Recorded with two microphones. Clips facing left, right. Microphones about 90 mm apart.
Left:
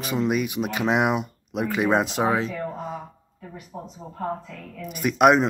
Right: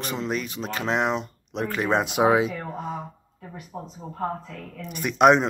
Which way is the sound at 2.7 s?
Centre (ahead or behind).